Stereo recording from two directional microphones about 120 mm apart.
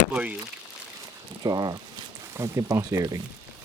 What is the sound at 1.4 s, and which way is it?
Speech, 35° right (ahead or behind).